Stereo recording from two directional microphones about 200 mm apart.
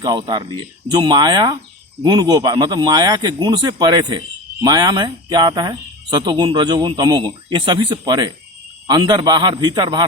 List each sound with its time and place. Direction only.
0.0 s speech: 20° right (ahead or behind)